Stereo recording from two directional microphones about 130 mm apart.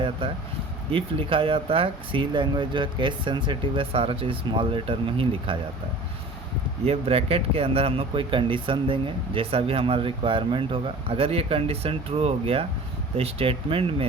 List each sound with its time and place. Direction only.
0.9 s speech: 45° right (ahead or behind)
6.8 s speech: 50° right (ahead or behind)